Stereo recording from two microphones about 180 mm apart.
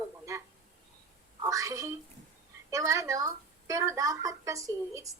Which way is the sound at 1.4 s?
20° right (ahead or behind).